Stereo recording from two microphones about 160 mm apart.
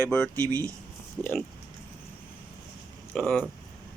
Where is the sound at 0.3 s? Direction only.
20° right (ahead or behind).